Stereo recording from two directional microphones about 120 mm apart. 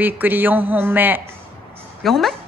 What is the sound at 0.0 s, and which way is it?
A woman's voice, 15° right (ahead or behind).